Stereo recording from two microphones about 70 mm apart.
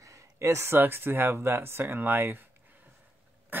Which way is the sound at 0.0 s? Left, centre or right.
Right.